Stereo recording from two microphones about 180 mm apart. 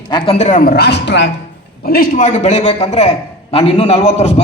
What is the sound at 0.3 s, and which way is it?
Speech, 45° left (ahead or behind).